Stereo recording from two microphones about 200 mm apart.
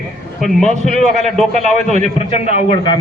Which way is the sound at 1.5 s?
35° right (ahead or behind).